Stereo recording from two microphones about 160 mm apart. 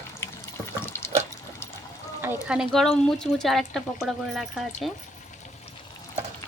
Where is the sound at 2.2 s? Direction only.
10° right (ahead or behind).